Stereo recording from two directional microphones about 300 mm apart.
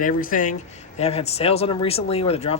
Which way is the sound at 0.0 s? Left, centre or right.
Left.